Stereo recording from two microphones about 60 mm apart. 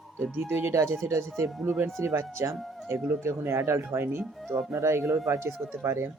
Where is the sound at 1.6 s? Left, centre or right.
Right.